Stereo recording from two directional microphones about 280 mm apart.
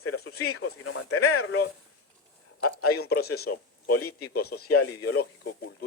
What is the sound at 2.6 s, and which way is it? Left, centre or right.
A man's voice, left.